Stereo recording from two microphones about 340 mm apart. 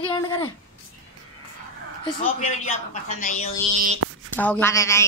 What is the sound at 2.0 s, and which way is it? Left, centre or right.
Speech, centre.